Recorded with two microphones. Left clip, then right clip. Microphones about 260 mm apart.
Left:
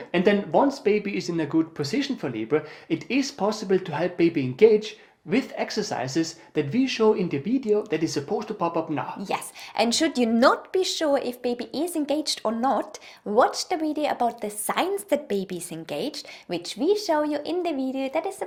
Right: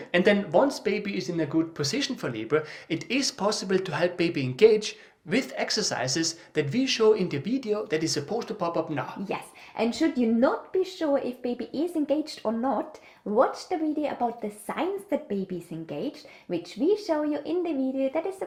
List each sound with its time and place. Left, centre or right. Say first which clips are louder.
0.1 s speech: even; right
1.8 s speech: left 1 dB; right
9.3 s speech: left 5 dB; left
11.0 s speech: left 3 dB; left
16.5 s speech: left 2 dB; left